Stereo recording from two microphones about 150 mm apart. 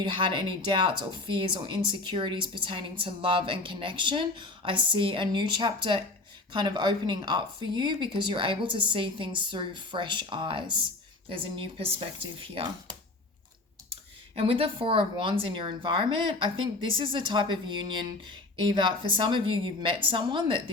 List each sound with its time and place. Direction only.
0.0 s speech: 30° right (ahead or behind)
13.9 s speech: 40° right (ahead or behind)